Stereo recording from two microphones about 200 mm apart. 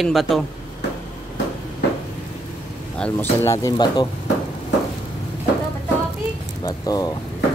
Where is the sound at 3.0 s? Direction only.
10° left (ahead or behind).